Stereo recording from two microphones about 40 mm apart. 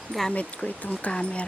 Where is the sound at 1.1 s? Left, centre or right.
Left.